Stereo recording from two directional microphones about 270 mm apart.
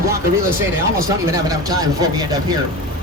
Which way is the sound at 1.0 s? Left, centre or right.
Centre.